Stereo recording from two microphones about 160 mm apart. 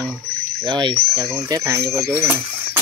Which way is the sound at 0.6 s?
30° right (ahead or behind).